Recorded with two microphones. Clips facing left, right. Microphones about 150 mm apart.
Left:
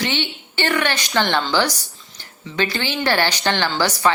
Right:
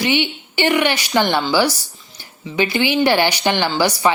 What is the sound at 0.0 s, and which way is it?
A woman's voice, 15° right (ahead or behind).